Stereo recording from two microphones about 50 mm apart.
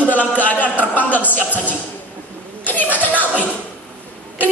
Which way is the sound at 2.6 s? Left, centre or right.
Left.